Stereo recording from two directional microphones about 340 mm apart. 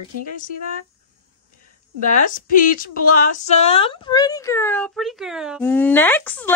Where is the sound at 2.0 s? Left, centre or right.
Left.